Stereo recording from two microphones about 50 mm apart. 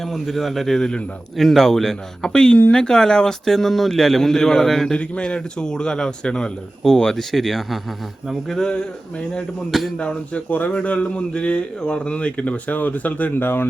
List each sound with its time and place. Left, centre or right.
0.0 s a man's voice: centre
1.4 s speech: centre
4.9 s speech: left; by 8.5 s centre
8.7 s a man's voice: left
10.5 s a man's voice: left